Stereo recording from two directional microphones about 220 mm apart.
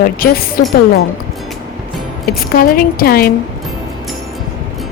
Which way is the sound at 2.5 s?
40° left (ahead or behind).